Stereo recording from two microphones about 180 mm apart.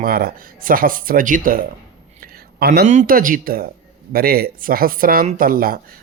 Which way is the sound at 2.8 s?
45° right (ahead or behind).